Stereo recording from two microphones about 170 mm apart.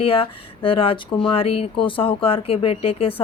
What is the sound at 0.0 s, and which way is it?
Speech, 30° left (ahead or behind).